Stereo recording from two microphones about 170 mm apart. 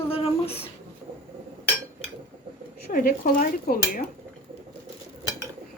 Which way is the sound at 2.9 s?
60° left (ahead or behind).